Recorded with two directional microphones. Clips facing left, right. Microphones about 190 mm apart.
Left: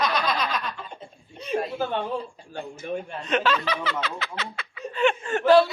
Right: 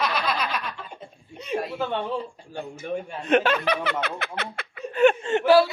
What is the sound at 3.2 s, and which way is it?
Speech, 55° right (ahead or behind).